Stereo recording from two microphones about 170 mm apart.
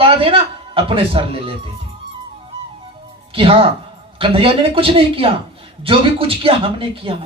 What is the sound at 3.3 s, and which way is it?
Speech, 35° right (ahead or behind).